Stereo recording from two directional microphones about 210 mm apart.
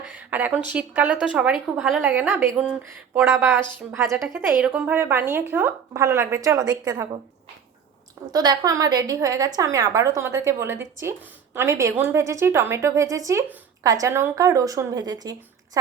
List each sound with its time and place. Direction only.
0.1 s a woman's voice: 5° right (ahead or behind)
8.3 s a woman's voice: 20° right (ahead or behind)